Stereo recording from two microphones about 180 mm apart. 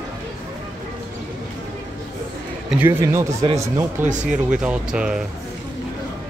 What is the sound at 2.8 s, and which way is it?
Speech, 15° right (ahead or behind).